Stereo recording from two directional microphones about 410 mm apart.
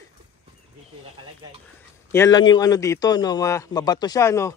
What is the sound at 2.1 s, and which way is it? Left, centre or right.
A man's voice, centre.